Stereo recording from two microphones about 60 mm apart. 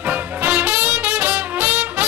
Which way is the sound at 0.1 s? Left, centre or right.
Right.